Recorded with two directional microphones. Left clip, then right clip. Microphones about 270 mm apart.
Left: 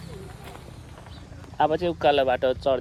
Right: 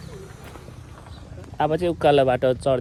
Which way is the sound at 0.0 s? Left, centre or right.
Left.